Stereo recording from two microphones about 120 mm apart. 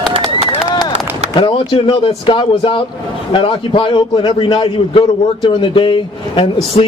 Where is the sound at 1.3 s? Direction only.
50° left (ahead or behind).